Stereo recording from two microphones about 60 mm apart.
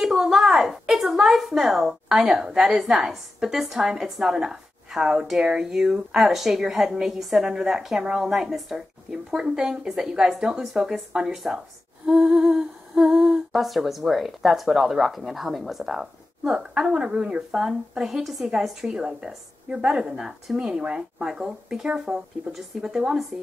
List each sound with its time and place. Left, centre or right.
0.0 s a woman's voice: centre